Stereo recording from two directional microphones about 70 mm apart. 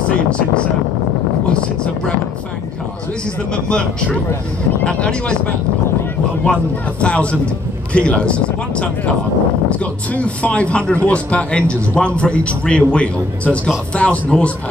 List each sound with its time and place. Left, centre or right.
1.5 s speech: centre
3.5 s speech: centre
6.4 s speech: centre
10.1 s speech: centre